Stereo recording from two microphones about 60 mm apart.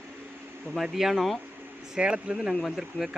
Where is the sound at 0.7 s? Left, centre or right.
Centre.